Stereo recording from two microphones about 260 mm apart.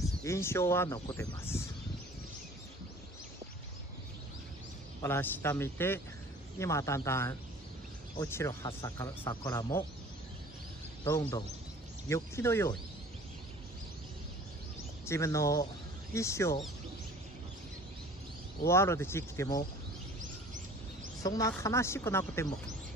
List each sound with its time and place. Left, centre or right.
0.2 s speech: centre
5.0 s speech: centre
11.1 s speech: centre
15.0 s speech: centre
18.7 s speech: centre
20.2 s a sound: right
21.2 s speech: centre